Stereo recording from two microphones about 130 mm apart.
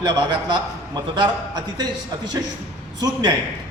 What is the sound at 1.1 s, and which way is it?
Speech, 30° right (ahead or behind).